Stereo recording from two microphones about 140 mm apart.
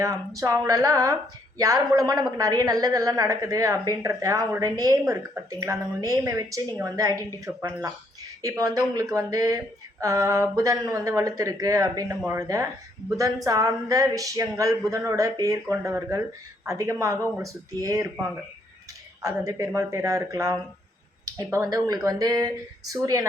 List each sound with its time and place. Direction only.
0.0 s a woman's voice: 25° right (ahead or behind)
19.2 s a woman's voice: 25° right (ahead or behind)